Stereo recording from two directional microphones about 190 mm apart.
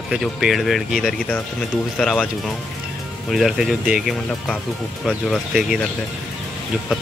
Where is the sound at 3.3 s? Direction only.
Centre (ahead or behind).